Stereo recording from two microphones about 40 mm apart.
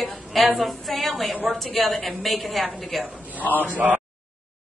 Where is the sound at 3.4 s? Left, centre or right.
Left.